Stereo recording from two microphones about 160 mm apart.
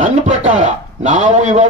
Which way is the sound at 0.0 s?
50° right (ahead or behind).